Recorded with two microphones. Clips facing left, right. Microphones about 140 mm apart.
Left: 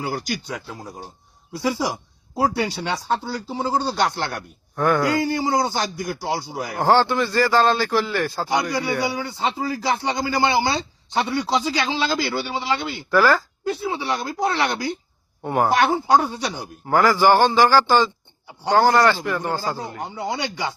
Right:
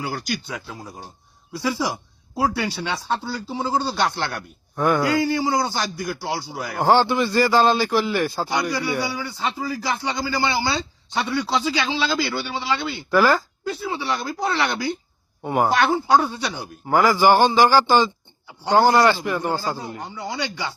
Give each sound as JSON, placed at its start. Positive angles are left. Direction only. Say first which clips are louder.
{"t": 0.5, "sound": "speech", "louder": "left 1 dB", "side_deg": 15}
{"t": 4.8, "sound": "a man's voice", "louder": "even", "side_deg": -10}
{"t": 5.0, "sound": "a man's voice", "louder": "right 1 dB", "side_deg": 20}
{"t": 6.9, "sound": "a man's voice", "louder": "even", "side_deg": -15}
{"t": 8.7, "sound": "a man's voice", "louder": "left 1 dB", "side_deg": 20}
{"t": 11.6, "sound": "speech", "louder": "even", "side_deg": 40}
{"t": 12.1, "sound": "a man's voice", "louder": "left 1 dB", "side_deg": 20}
{"t": 13.1, "sound": "a man's voice", "louder": "even", "side_deg": -15}
{"t": 13.7, "sound": "a man's voice", "louder": "left 2 dB", "side_deg": 20}
{"t": 15.4, "sound": "a man's voice", "louder": "even", "side_deg": -10}
{"t": 15.7, "sound": "a man's voice", "louder": "left 1 dB", "side_deg": 20}
{"t": 16.8, "sound": "a man's voice", "louder": "even", "side_deg": -15}
{"t": 18.7, "sound": "a man's voice", "louder": "even", "side_deg": -5}
{"t": 20.0, "sound": "a man's voice", "louder": "left 2 dB", "side_deg": 20}